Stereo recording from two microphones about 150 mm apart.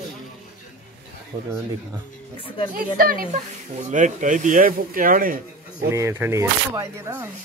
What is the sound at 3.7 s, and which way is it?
Speech, 55° right (ahead or behind).